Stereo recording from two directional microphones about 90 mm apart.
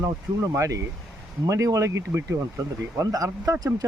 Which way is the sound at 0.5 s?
35° right (ahead or behind).